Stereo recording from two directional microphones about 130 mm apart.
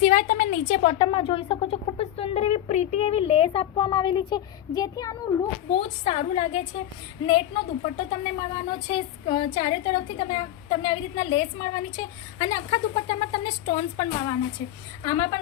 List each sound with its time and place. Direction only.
0.0 s a woman's voice: 85° left; by 0.9 s 50° left (ahead or behind)
0.9 s speech: 40° left (ahead or behind)
5.7 s a woman's voice: 50° left (ahead or behind); by 15.4 s 30° left (ahead or behind)